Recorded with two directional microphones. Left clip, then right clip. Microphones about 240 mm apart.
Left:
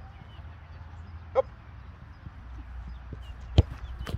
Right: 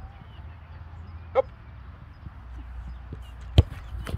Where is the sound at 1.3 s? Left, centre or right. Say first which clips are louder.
Right 2 dB; right.